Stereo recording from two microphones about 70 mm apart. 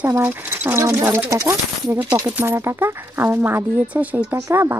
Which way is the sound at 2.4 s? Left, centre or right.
Right.